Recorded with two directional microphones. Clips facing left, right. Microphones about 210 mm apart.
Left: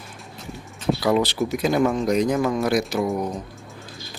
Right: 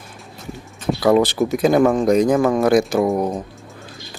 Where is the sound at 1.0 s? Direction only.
50° right (ahead or behind).